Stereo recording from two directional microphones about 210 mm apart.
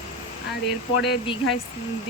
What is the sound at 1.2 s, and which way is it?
Speech, 25° left (ahead or behind).